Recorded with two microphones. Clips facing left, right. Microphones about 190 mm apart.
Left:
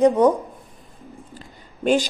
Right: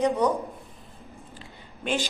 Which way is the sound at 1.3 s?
40° left (ahead or behind).